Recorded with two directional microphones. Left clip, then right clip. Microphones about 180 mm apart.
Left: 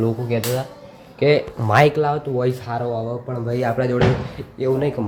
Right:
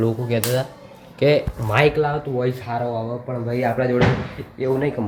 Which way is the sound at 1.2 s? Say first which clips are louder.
Even; 10° left (ahead or behind).